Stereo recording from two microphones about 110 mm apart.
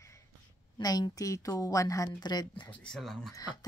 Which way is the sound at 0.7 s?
40° left (ahead or behind).